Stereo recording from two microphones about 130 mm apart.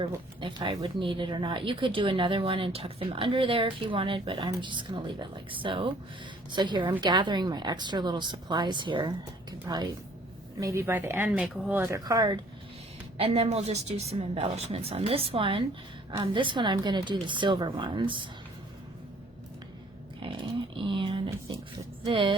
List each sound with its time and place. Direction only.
0.0 s speech: 40° right (ahead or behind)
13.1 s a woman's voice: 50° right (ahead or behind)
20.2 s a sound: 40° right (ahead or behind)
22.0 s speech: 40° right (ahead or behind)